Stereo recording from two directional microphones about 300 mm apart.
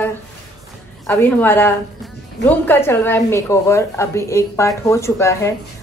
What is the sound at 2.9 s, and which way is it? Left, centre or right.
A woman's voice, centre.